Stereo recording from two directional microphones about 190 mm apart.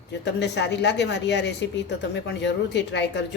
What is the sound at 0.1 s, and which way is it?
A woman's voice, 65° left (ahead or behind).